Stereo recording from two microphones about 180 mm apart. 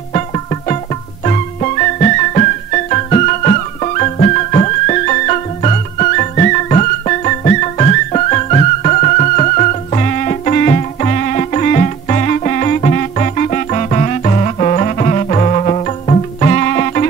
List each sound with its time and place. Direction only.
0.1 s music: 35° left (ahead or behind)